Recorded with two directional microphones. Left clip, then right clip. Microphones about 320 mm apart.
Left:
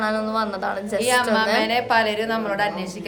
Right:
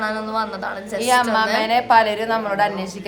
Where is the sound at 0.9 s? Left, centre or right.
Centre.